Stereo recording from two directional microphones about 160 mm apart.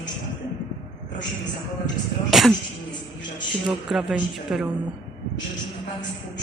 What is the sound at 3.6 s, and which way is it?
Speech, centre (ahead or behind).